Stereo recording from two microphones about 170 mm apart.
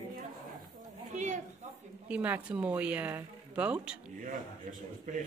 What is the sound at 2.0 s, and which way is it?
Speech, 10° right (ahead or behind).